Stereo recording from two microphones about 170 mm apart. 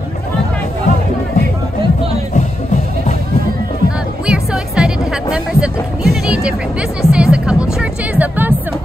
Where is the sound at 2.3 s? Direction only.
45° left (ahead or behind).